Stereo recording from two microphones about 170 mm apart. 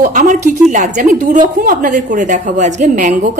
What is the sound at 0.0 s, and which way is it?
A woman's voice, 50° right (ahead or behind).